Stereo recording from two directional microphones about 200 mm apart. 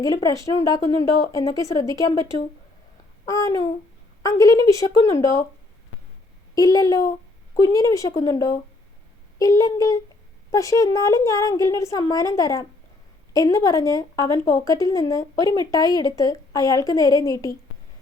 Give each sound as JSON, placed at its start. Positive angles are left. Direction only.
{"t": 0.0, "sound": "speech", "side_deg": 15}
{"t": 6.5, "sound": "speech", "side_deg": 15}